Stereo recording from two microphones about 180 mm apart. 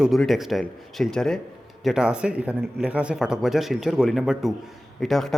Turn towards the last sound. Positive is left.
turn(degrees=0)  # may be behind; listen again after turning